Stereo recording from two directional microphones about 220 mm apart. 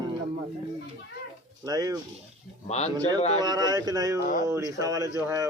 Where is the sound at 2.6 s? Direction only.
30° left (ahead or behind).